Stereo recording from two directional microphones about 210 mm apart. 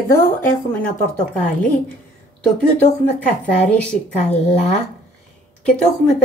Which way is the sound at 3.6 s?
5° left (ahead or behind).